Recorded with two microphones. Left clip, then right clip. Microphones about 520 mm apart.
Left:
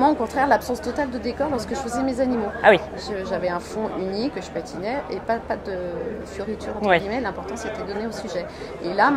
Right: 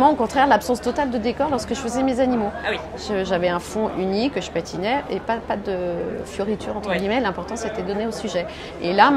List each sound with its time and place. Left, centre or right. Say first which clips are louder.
0.0 s a woman's voice: right 3 dB; right
2.6 s speech: left 15 dB; left
3.1 s a woman's voice: right 5 dB; right
7.1 s a woman's voice: right 4 dB; right